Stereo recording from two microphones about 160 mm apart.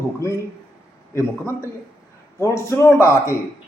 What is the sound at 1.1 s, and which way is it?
A man's voice, 15° left (ahead or behind).